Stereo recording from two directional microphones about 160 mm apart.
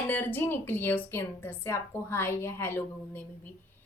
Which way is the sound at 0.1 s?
10° left (ahead or behind).